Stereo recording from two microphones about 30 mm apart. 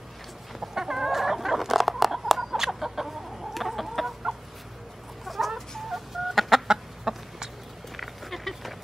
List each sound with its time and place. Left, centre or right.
0.6 s chicken: centre
5.2 s chicken: centre
6.7 s chicken: centre
8.0 s a sound: centre